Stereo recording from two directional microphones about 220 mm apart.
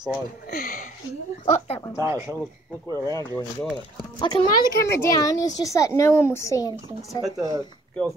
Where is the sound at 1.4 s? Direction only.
30° left (ahead or behind).